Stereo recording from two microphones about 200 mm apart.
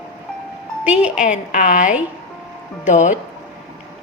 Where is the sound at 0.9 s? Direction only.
5° right (ahead or behind).